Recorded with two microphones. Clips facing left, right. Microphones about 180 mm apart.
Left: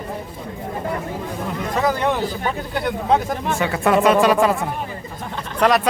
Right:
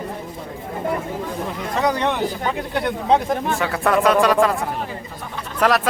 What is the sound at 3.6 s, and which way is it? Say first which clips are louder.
Speech: left 4 dB; centre (ahead or behind).